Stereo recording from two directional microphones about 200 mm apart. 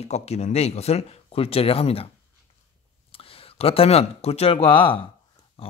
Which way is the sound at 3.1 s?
30° left (ahead or behind).